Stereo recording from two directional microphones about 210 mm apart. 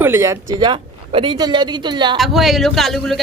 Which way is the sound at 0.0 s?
10° right (ahead or behind).